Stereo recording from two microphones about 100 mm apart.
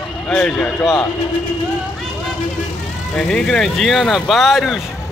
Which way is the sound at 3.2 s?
5° left (ahead or behind).